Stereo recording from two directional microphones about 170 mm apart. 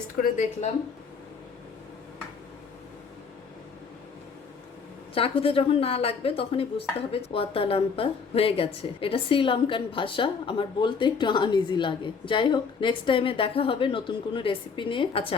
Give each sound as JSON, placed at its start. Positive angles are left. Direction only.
{"t": 0.2, "sound": "a woman's voice", "side_deg": 45}
{"t": 5.1, "sound": "a woman's voice", "side_deg": 35}